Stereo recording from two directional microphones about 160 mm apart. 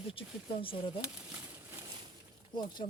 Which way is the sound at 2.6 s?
25° left (ahead or behind).